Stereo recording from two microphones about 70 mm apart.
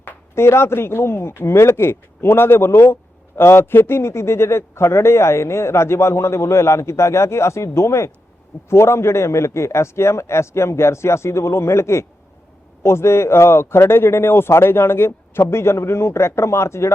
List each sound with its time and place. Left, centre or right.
0.0 s speech: left